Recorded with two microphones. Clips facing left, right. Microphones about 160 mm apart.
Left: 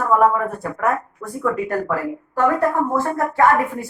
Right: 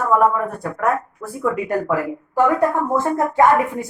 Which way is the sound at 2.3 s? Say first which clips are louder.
Right 1 dB; 15° right (ahead or behind).